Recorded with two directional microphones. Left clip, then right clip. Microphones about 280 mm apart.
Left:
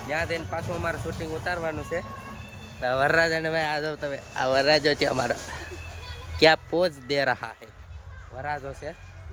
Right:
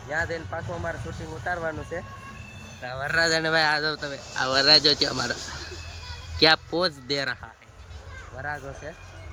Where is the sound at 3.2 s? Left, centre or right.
Centre.